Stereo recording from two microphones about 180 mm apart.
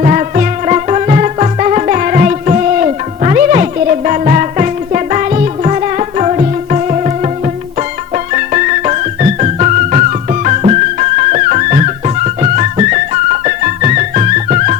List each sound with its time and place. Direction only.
0.0 s music: 45° right (ahead or behind)